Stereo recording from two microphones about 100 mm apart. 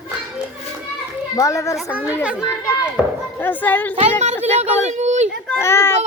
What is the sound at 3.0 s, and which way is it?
Speech, 5° right (ahead or behind).